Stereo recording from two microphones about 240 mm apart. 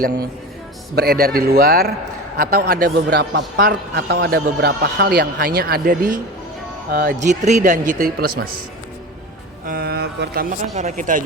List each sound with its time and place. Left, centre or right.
0.9 s a man's voice: right
9.6 s speech: right
10.8 s a man's voice: right